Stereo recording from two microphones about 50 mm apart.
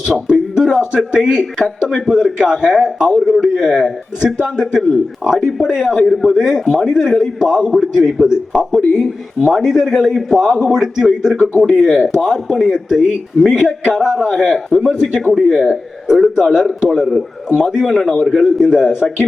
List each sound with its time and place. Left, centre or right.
0.0 s a sound: centre
0.9 s a man's voice: centre
15.2 s a man's voice: centre